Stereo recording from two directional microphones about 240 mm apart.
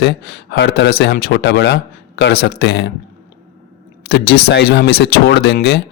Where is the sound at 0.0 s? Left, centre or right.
Left.